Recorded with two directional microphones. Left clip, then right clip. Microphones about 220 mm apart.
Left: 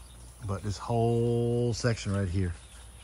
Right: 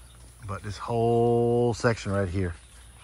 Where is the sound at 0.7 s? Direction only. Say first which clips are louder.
Right 4 dB; 20° left (ahead or behind).